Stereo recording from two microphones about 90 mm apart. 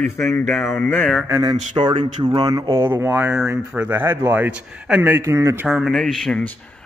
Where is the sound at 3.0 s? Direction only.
30° right (ahead or behind).